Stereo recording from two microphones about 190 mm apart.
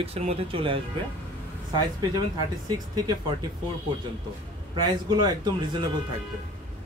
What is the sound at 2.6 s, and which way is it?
Speech, 20° right (ahead or behind).